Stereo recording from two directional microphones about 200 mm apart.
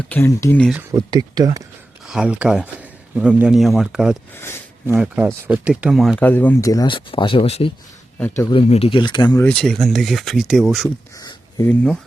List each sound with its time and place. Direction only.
0.1 s speech: 10° left (ahead or behind)
0.9 s speech: 20° right (ahead or behind)
2.0 s a man's voice: 5° right (ahead or behind)
4.4 s speech: 10° left (ahead or behind)
4.9 s speech: 10° right (ahead or behind); by 9.5 s 20° left (ahead or behind)
9.5 s speech: 5° left (ahead or behind)
11.2 s a sound: 20° left (ahead or behind)
11.7 s speech: 5° left (ahead or behind)